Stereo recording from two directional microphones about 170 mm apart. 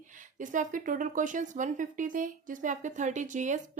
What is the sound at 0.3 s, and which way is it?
A woman's voice, 50° right (ahead or behind).